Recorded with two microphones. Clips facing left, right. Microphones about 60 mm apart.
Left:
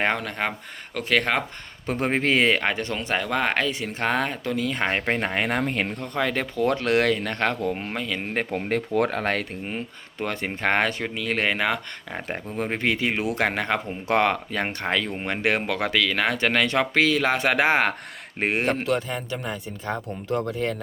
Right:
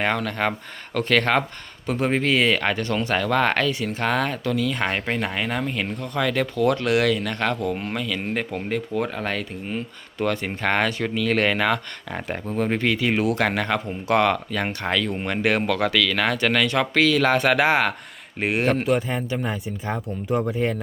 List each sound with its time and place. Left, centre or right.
0.2 s speech: centre
1.9 s speech: left
2.6 s speech: left
3.7 s speech: left
6.0 s speech: left
8.7 s speech: left
9.6 s speech: left
18.9 s speech: centre